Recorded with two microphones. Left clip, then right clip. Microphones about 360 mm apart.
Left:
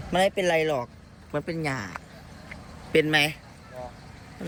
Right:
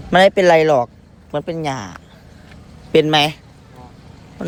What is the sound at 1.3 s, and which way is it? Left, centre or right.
Speech, centre.